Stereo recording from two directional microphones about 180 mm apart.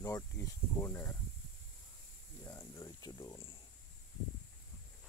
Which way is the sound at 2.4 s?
15° left (ahead or behind).